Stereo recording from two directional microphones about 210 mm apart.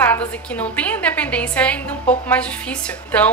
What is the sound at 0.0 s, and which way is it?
A woman's voice, 5° left (ahead or behind).